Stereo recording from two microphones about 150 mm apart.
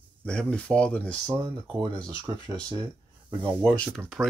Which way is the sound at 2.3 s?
35° right (ahead or behind).